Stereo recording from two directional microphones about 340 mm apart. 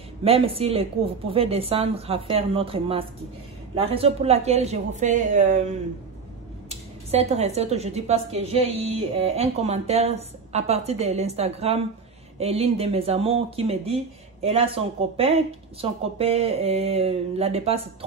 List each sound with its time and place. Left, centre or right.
0.2 s a woman's voice: centre
7.1 s a woman's voice: centre